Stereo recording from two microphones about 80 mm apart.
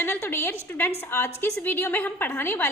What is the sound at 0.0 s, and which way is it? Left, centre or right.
A woman's voice, left.